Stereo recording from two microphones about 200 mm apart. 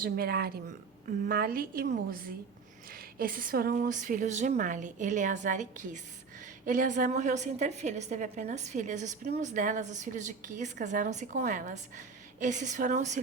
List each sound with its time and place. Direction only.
0.0 s a woman's voice: 50° right (ahead or behind)